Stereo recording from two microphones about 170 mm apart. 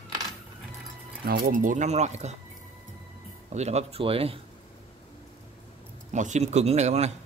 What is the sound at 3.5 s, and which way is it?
Speech, 40° right (ahead or behind).